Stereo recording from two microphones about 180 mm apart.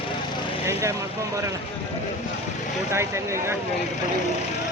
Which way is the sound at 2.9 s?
15° right (ahead or behind).